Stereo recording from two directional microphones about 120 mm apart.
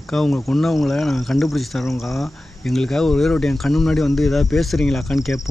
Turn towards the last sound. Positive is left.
turn(degrees=0)  # may be behind; listen again after turning